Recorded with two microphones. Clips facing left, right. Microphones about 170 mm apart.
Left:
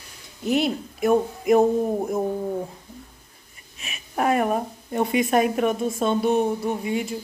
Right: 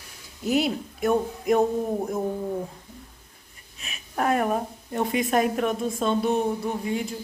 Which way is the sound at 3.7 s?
5° left (ahead or behind).